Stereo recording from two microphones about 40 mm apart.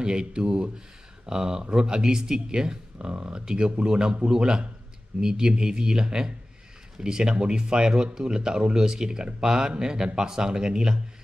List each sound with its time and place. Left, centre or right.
0.0 s speech: right